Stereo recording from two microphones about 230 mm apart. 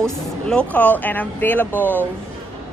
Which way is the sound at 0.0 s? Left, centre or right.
Centre.